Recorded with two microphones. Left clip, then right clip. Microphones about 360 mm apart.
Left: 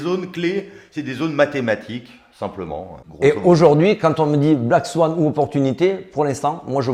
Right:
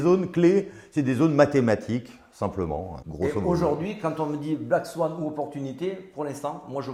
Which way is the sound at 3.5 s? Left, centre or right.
Left.